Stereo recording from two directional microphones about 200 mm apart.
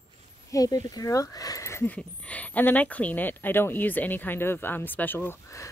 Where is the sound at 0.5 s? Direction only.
20° left (ahead or behind).